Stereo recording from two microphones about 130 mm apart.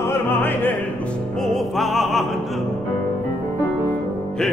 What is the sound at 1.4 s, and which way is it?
Music, centre (ahead or behind).